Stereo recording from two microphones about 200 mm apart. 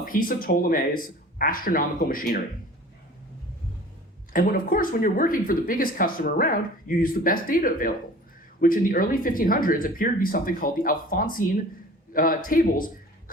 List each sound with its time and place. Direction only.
0.0 s speech: 45° left (ahead or behind)
4.3 s a man's voice: 45° left (ahead or behind)